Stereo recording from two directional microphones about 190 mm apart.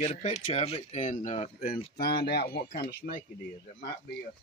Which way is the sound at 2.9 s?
70° left (ahead or behind).